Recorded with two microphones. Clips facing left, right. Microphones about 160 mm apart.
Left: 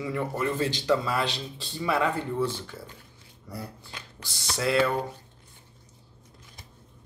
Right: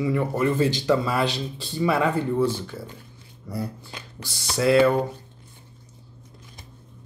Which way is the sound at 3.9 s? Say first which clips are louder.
Right 4 dB; 20° right (ahead or behind).